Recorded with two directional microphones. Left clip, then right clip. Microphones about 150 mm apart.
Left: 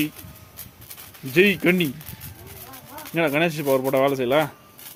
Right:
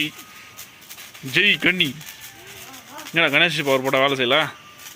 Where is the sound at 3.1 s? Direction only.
10° left (ahead or behind).